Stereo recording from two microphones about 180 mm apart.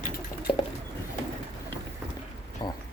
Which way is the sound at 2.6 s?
25° left (ahead or behind).